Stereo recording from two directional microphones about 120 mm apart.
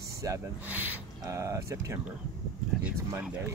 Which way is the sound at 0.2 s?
30° right (ahead or behind).